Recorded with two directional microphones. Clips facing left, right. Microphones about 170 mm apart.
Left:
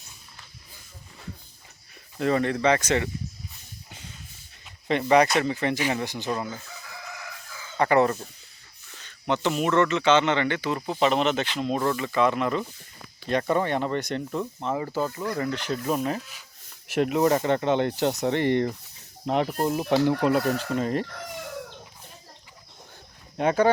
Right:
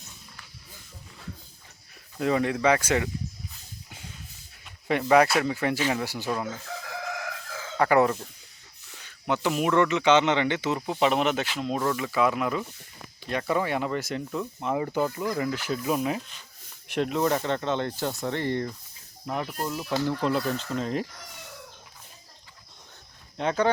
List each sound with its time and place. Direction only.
2.1 s speech: 5° right (ahead or behind)
4.6 s speech: centre (ahead or behind)
6.7 s crowing: 90° right
7.8 s speech: 5° right (ahead or behind)
13.3 s speech: 35° left (ahead or behind)
13.8 s speech: 5° right (ahead or behind); by 18.3 s 20° left (ahead or behind)
18.3 s speech: 70° left (ahead or behind)
19.5 s speech: 40° left (ahead or behind)
20.3 s speech: 70° left (ahead or behind)
20.6 s speech: 5° left (ahead or behind)
23.4 s speech: 10° left (ahead or behind)